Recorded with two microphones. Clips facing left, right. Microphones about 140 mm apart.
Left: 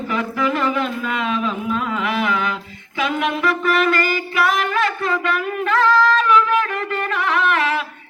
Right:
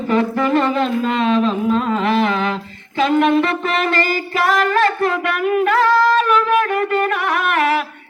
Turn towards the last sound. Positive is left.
turn(degrees=-60)  # may be behind; listen again after turning